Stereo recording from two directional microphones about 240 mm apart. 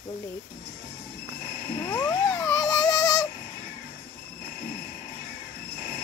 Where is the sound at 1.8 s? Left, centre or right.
Centre.